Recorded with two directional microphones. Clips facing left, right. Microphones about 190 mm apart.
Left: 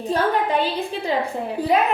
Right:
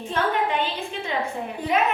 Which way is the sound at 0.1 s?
35° left (ahead or behind).